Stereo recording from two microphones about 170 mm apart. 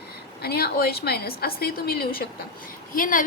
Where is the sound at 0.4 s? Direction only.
65° left (ahead or behind).